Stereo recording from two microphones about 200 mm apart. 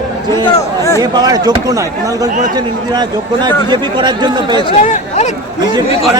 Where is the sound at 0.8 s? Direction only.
15° left (ahead or behind).